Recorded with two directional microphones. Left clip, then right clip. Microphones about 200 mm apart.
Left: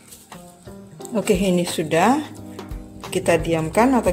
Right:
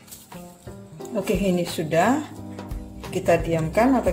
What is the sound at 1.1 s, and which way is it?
Speech, 45° left (ahead or behind).